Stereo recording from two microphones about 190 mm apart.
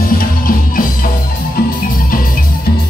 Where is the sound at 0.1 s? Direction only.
50° left (ahead or behind).